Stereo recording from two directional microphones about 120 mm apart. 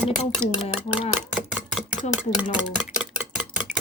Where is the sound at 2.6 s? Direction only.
5° right (ahead or behind).